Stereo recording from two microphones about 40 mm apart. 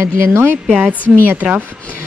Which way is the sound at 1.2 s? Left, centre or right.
Right.